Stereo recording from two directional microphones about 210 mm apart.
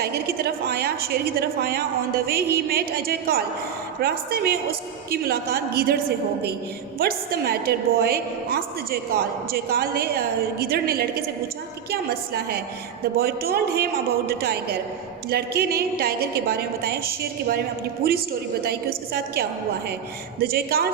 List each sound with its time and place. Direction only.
0.0 s a woman's voice: 50° right (ahead or behind)
7.0 s a woman's voice: 45° right (ahead or behind)